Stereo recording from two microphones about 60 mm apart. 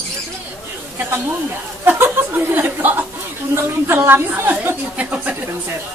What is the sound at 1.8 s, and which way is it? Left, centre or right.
Chuckle, right.